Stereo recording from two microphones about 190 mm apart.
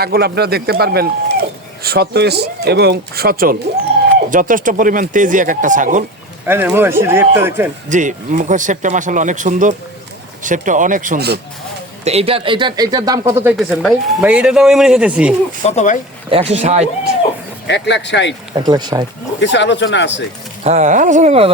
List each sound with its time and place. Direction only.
0.0 s speech: 55° right (ahead or behind)
6.5 s speech: 10° right (ahead or behind)
7.9 s speech: 40° right (ahead or behind)
12.0 s speech: 30° right (ahead or behind); by 13.5 s 15° right (ahead or behind)
13.6 s a man's voice: 5° right (ahead or behind)
15.6 s speech: 35° left (ahead or behind)
16.3 s speech: 30° right (ahead or behind)
17.7 s speech: 65° left (ahead or behind)
18.5 s speech: 20° right (ahead or behind)
19.4 s speech: 70° left (ahead or behind)
20.7 s speech: 40° right (ahead or behind)